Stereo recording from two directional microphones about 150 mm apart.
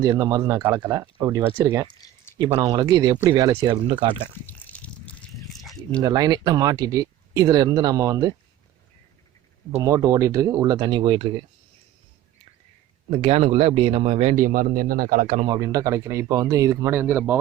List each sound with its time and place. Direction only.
0.0 s speech: 25° right (ahead or behind)
2.4 s speech: 30° right (ahead or behind)
4.4 s a sound: 10° left (ahead or behind)
6.0 s speech: 25° right (ahead or behind)
9.7 s speech: 20° right (ahead or behind)
13.1 s speech: 40° right (ahead or behind)
14.3 s speech: 65° right (ahead or behind)
15.4 s speech: 25° right (ahead or behind)